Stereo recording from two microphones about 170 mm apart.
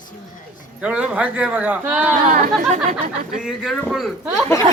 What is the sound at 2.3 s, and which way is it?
Speech, 50° right (ahead or behind).